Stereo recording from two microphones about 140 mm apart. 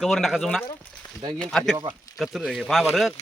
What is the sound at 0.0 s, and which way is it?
Speech, centre (ahead or behind).